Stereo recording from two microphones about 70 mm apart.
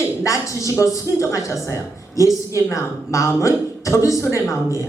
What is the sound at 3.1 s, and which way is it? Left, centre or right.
Speech, left.